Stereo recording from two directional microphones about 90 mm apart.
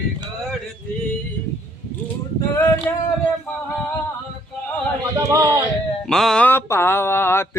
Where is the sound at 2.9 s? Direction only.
25° left (ahead or behind).